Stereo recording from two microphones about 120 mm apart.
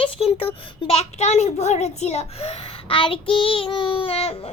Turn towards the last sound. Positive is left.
turn(degrees=55)  # may be behind; listen again after turning